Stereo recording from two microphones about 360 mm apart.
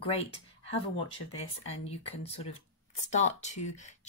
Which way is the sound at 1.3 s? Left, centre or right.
Centre.